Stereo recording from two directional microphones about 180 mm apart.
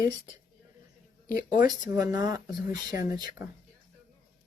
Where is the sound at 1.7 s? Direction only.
20° right (ahead or behind).